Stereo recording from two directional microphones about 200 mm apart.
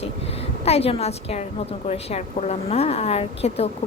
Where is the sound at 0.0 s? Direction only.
30° left (ahead or behind).